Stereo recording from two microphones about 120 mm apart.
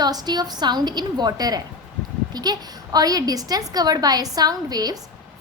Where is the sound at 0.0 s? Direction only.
35° right (ahead or behind).